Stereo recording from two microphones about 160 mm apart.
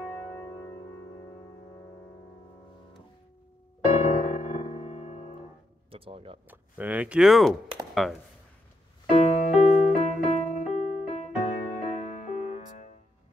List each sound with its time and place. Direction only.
3.9 s music: 50° left (ahead or behind)
5.9 s speech: 35° right (ahead or behind)
6.5 s speech: 10° right (ahead or behind)
9.1 s music: 45° left (ahead or behind)